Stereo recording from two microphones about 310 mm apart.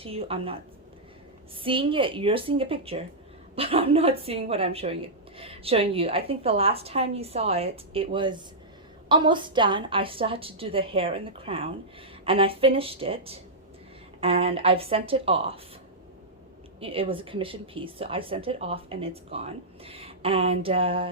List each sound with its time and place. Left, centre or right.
0.0 s speech: centre
1.6 s a woman's voice: centre
16.8 s speech: centre